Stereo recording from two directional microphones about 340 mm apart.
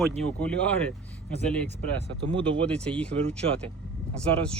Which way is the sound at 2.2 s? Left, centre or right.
Centre.